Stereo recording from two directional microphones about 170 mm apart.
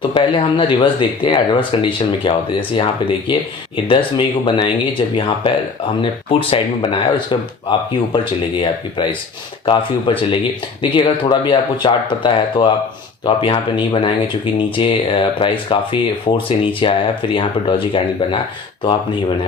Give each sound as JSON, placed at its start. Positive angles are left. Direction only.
{"t": 0.0, "sound": "speech", "side_deg": 30}
{"t": 7.7, "sound": "speech", "side_deg": 30}